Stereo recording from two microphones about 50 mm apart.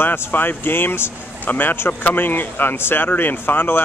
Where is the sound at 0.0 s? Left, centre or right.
Left.